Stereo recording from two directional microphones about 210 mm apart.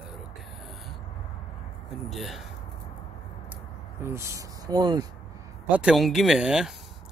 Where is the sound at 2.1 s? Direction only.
Centre (ahead or behind).